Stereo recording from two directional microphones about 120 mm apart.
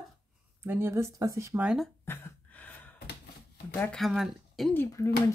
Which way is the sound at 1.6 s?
5° right (ahead or behind).